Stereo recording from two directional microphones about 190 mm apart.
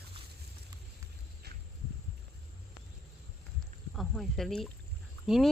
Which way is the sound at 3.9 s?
Centre (ahead or behind).